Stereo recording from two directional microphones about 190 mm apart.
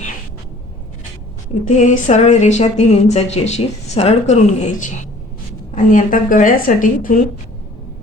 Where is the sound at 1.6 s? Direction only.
40° left (ahead or behind).